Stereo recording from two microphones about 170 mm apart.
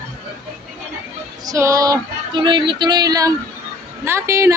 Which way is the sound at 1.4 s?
20° right (ahead or behind).